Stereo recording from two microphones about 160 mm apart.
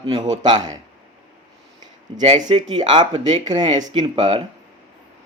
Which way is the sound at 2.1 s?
30° right (ahead or behind).